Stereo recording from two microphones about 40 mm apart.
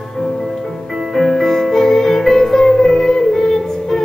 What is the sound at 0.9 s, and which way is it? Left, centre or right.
Music, centre.